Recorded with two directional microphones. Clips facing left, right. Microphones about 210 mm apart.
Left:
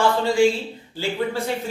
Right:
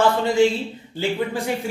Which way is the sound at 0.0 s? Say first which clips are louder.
Right 1 dB; 20° right (ahead or behind).